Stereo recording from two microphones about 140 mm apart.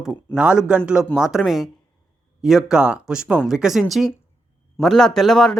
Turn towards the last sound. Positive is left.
turn(degrees=5)  # may be behind; listen again after turning